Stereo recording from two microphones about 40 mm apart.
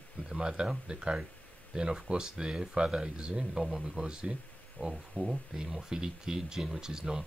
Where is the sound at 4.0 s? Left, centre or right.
Centre.